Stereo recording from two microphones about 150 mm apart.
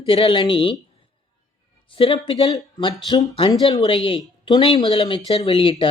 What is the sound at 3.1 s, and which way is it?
Speech, 25° left (ahead or behind).